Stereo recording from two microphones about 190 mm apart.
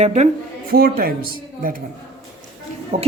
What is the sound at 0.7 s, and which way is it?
Speech, 50° right (ahead or behind).